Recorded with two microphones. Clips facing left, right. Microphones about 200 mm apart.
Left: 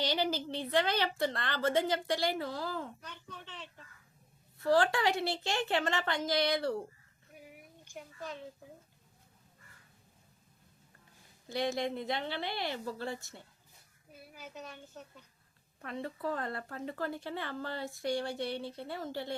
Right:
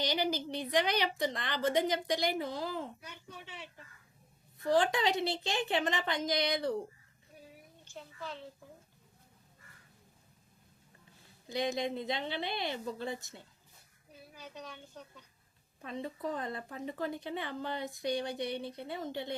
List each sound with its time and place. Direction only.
0.0 s speech: 15° right (ahead or behind)
7.3 s a sound: 15° left (ahead or behind)
11.4 s speech: 15° right (ahead or behind)
14.1 s a woman's voice: 5° left (ahead or behind)
15.8 s speech: 20° right (ahead or behind)